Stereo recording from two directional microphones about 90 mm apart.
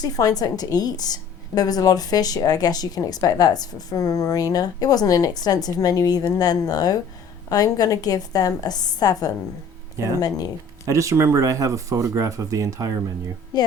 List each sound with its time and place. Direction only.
0.0 s a woman's voice: 45° left (ahead or behind)
10.8 s speech: 35° right (ahead or behind)
13.5 s a woman's voice: 50° left (ahead or behind)